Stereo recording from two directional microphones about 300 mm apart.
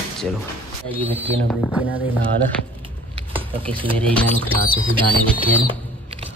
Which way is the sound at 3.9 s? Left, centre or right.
Centre.